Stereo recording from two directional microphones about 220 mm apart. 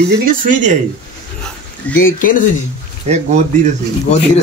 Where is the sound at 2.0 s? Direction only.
40° left (ahead or behind).